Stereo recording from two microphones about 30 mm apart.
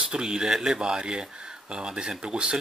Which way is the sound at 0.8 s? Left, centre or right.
Right.